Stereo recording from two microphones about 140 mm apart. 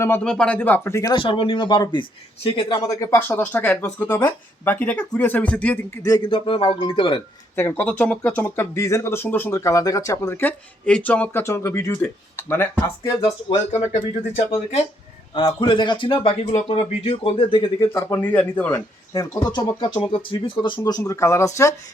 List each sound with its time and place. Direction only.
0.3 s speech: 10° left (ahead or behind)
1.1 s speech: 35° left (ahead or behind)
3.2 s speech: 15° left (ahead or behind)
6.0 s speech: 25° left (ahead or behind)
7.5 s speech: 15° left (ahead or behind)
13.7 s speech: 50° left (ahead or behind)
15.4 s speech: 35° left (ahead or behind)
17.9 s speech: 15° left (ahead or behind)
19.1 s speech: 25° left (ahead or behind)